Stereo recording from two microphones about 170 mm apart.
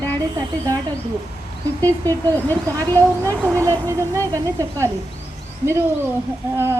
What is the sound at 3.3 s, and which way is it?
Speech, 5° right (ahead or behind).